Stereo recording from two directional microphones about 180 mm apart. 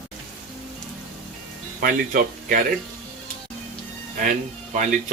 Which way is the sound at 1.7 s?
50° right (ahead or behind).